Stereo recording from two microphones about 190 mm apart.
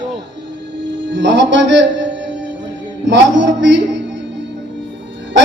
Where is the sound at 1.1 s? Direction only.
70° right (ahead or behind).